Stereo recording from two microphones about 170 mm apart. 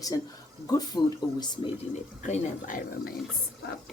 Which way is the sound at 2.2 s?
50° left (ahead or behind).